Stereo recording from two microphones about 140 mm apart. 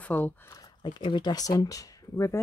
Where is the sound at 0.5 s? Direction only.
30° left (ahead or behind).